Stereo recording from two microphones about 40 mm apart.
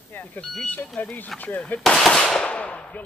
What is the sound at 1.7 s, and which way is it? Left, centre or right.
Speech, left.